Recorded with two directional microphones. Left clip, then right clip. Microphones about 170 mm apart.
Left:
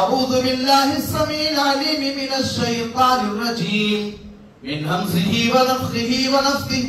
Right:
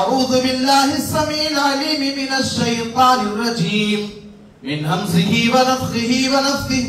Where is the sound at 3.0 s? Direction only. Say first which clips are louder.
Right 3 dB; 20° right (ahead or behind).